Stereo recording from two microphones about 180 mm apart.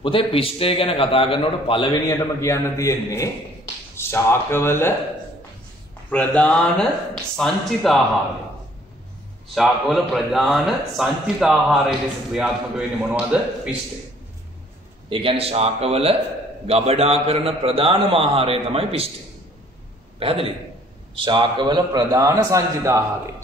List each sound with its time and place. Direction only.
0.0 s a man's voice: 30° left (ahead or behind)
2.0 s a man's voice: 15° left (ahead or behind)
6.0 s a man's voice: 5° left (ahead or behind)
9.6 s a man's voice: centre (ahead or behind)
15.0 s a man's voice: 30° right (ahead or behind)
20.2 s a man's voice: 30° right (ahead or behind)